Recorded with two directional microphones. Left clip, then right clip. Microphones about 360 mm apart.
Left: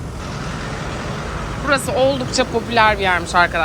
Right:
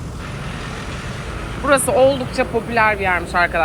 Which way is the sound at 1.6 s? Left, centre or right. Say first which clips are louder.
Right 3 dB; centre.